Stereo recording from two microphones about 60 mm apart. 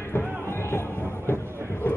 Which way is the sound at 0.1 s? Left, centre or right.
Left.